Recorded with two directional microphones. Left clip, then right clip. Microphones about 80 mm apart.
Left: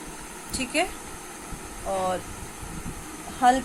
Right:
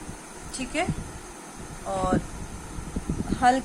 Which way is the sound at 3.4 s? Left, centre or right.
Centre.